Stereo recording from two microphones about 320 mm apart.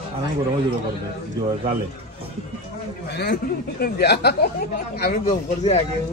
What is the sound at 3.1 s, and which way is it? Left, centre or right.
A man's voice, left.